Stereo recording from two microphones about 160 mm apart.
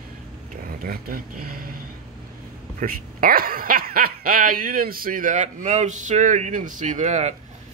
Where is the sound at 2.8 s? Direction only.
65° right (ahead or behind); by 7.3 s 45° right (ahead or behind).